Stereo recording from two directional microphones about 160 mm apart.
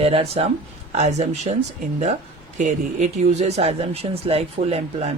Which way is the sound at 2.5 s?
50° right (ahead or behind).